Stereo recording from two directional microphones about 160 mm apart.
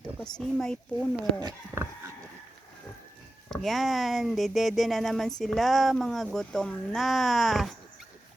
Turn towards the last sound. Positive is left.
turn(degrees=0)  # may be behind; listen again after turning